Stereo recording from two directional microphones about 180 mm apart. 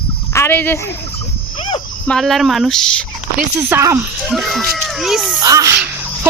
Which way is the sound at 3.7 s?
15° right (ahead or behind).